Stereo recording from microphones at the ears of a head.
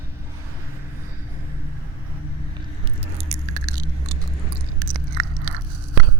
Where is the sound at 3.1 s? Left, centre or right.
Right.